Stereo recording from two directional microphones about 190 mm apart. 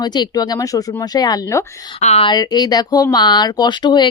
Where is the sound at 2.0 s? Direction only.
35° left (ahead or behind).